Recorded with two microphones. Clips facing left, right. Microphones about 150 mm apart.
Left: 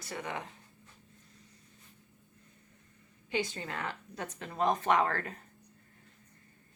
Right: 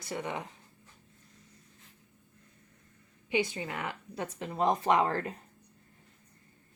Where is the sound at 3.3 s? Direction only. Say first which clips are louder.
Right 3 dB; 15° right (ahead or behind).